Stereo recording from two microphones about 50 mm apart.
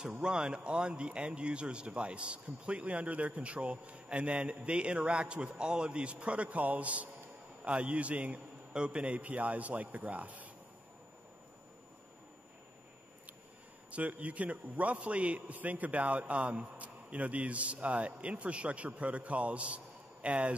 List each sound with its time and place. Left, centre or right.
0.2 s a man's voice: centre
13.8 s a man's voice: right